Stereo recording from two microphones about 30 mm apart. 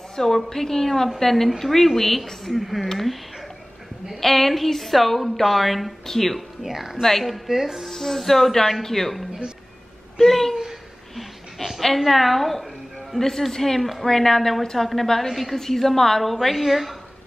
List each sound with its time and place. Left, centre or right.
0.1 s a woman's voice: centre
4.2 s a woman's voice: centre
6.6 s speech: centre
7.0 s a woman's voice: centre
7.4 s speech: centre
7.9 s a woman's voice: centre
10.2 s a woman's voice: centre
11.1 s a sound: centre
12.0 s a woman's voice: centre
13.1 s a woman's voice: centre
13.7 s a woman's voice: centre
14.0 s a woman's voice: centre
15.2 s a woman's voice: centre
15.5 s a woman's voice: centre